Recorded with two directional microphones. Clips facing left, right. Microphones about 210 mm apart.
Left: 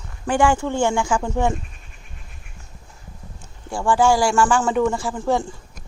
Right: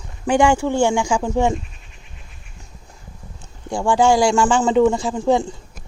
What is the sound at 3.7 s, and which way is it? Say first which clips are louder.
Speech: right 2 dB; 15° right (ahead or behind).